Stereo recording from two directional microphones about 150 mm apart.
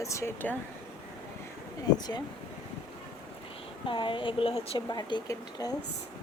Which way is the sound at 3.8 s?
35° left (ahead or behind).